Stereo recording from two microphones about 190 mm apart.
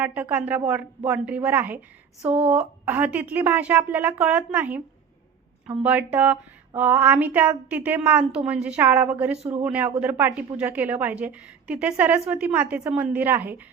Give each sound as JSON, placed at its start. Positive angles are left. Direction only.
{"t": 0.0, "sound": "a woman's voice", "side_deg": -10}
{"t": 9.4, "sound": "speech", "side_deg": -35}
{"t": 9.6, "sound": "a woman's voice", "side_deg": -10}